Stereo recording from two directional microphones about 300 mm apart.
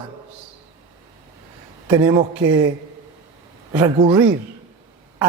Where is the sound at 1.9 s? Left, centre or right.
Centre.